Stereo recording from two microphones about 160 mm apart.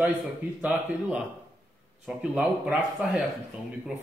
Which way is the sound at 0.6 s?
10° right (ahead or behind).